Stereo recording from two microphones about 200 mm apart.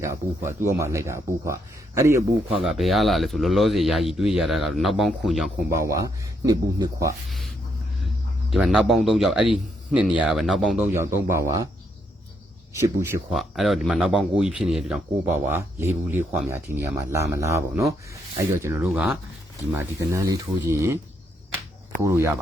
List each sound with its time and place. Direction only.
0.0 s speech: 15° right (ahead or behind)
2.6 s speech: centre (ahead or behind)
5.8 s speech: 15° right (ahead or behind)
7.3 s a sound: centre (ahead or behind)
8.4 s speech: 5° right (ahead or behind)
10.9 s speech: 15° right (ahead or behind)
12.8 s speech: 15° right (ahead or behind)
13.3 s speech: centre (ahead or behind)
19.7 s speech: 15° right (ahead or behind)
22.0 s speech: 15° right (ahead or behind)